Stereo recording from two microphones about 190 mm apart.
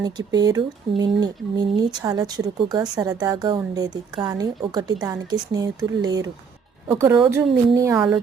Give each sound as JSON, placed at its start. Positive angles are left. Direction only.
{"t": 0.0, "sound": "a woman's voice", "side_deg": -20}